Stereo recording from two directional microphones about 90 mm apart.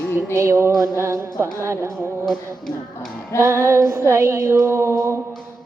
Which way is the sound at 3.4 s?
30° right (ahead or behind).